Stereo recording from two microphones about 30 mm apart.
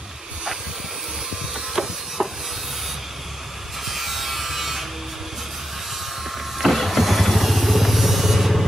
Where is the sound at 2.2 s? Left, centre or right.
Right.